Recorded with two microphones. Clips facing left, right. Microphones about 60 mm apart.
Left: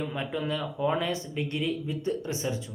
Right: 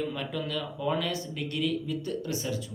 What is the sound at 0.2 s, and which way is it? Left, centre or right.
Speech, left.